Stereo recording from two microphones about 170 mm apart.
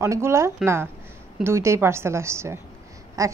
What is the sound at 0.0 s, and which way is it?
A woman's voice, 15° right (ahead or behind).